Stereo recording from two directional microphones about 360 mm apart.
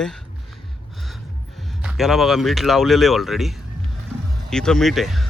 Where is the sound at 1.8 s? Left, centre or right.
Centre.